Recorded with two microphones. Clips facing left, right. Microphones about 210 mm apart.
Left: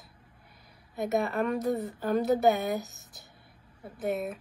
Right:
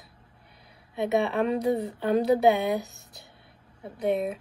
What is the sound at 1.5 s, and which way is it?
Speech, 25° right (ahead or behind).